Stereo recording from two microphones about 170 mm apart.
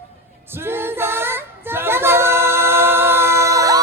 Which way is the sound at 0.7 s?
15° right (ahead or behind).